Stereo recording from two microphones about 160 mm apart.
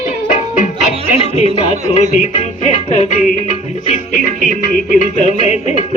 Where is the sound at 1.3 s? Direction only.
40° left (ahead or behind).